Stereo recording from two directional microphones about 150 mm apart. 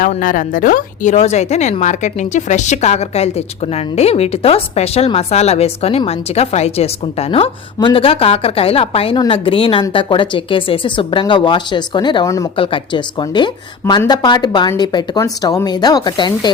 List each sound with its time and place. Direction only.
0.0 s a woman's voice: 65° left (ahead or behind); by 12.5 s 20° left (ahead or behind)
12.5 s a woman's voice: 35° left (ahead or behind)